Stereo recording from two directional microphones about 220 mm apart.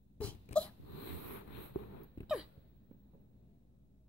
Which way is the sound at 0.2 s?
5° left (ahead or behind).